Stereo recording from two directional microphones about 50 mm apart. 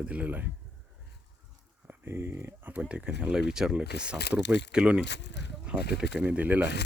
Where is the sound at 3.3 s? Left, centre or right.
Centre.